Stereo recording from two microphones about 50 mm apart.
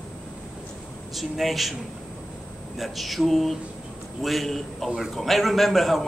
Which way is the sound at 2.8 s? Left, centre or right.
Centre.